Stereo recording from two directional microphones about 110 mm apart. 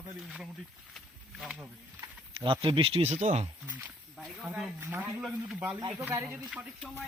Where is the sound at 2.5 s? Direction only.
50° right (ahead or behind); by 3.5 s 90° right.